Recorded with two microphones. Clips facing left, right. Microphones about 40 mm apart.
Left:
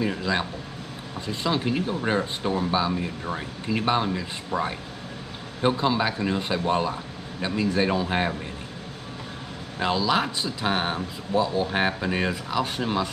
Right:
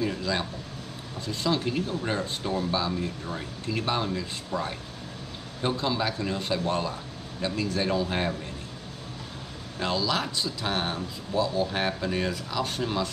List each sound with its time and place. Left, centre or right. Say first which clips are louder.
0.0 s speech: left 3 dB; left
9.8 s speech: left 4 dB; left